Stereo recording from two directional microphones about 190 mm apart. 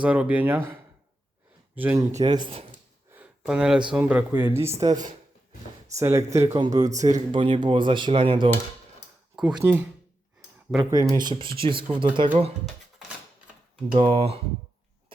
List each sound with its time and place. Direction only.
0.0 s speech: 5° right (ahead or behind); by 2.6 s 25° right (ahead or behind)
3.1 s a sound: 5° right (ahead or behind)
3.9 s speech: 10° right (ahead or behind); by 8.4 s 25° right (ahead or behind)
9.3 s a sound: 5° right (ahead or behind)
9.6 s speech: 10° right (ahead or behind)
11.1 s speech: 20° right (ahead or behind)
13.9 s speech: 25° right (ahead or behind)